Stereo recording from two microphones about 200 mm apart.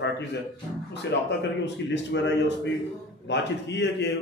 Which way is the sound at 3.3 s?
60° left (ahead or behind).